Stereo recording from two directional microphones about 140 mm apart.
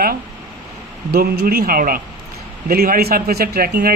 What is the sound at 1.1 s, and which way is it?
Speech, 90° right.